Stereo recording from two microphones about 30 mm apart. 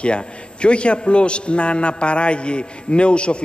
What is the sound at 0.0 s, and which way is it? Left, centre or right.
A man's voice, left.